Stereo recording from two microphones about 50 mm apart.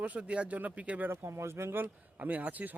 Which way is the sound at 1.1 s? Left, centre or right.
Right.